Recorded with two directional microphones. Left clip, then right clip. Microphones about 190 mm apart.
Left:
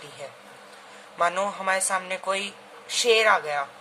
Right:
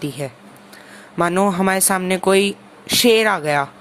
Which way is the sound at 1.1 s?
45° right (ahead or behind).